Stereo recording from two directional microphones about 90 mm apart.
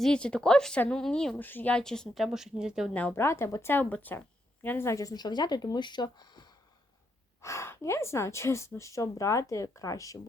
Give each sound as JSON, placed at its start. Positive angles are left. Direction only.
{"t": 0.0, "sound": "a woman's voice", "side_deg": 10}
{"t": 1.4, "sound": "speech", "side_deg": 20}
{"t": 1.7, "sound": "a woman's voice", "side_deg": 5}
{"t": 2.2, "sound": "speech", "side_deg": -5}
{"t": 2.9, "sound": "speech", "side_deg": 20}
{"t": 4.9, "sound": "speech", "side_deg": 40}
{"t": 7.4, "sound": "a woman's voice", "side_deg": 30}